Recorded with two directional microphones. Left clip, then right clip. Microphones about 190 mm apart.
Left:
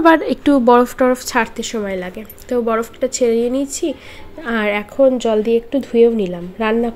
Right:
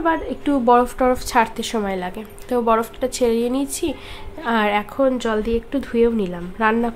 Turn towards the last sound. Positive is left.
turn(degrees=5)  # may be behind; listen again after turning